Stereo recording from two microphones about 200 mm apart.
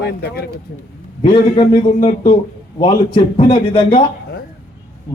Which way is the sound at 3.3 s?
25° left (ahead or behind).